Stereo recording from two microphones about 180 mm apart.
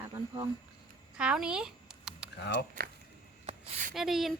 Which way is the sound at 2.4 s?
65° left (ahead or behind).